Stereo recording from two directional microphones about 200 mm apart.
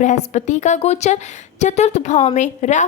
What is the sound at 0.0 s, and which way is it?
A woman's voice, 35° left (ahead or behind).